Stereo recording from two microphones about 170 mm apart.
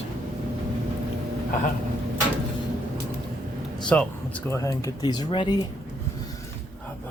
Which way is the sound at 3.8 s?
5° left (ahead or behind).